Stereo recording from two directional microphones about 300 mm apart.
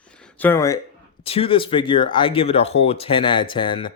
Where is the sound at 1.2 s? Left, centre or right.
Centre.